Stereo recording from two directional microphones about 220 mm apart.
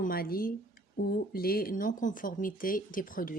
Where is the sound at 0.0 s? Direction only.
40° left (ahead or behind).